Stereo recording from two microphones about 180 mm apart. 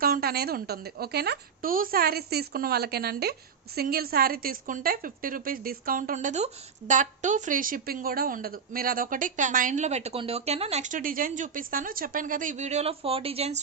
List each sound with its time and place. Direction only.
0.0 s a woman's voice: 55° right (ahead or behind); by 13.6 s 35° right (ahead or behind)